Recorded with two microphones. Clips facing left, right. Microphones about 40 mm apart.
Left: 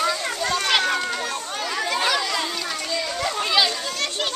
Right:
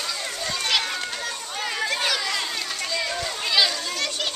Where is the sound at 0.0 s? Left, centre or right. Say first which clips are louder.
Left 6 dB; left.